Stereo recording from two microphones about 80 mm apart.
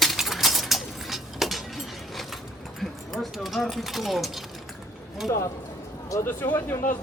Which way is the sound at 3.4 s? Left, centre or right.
Centre.